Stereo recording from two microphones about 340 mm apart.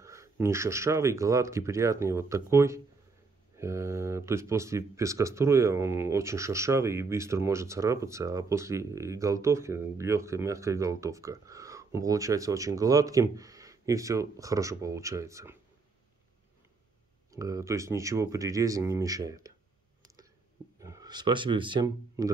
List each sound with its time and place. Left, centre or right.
0.0 s speech: centre
17.3 s speech: centre
20.8 s speech: centre